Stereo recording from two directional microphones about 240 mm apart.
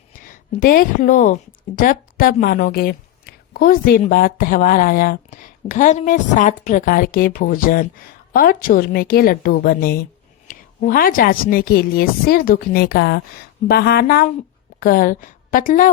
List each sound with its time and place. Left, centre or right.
0.3 s a woman's voice: left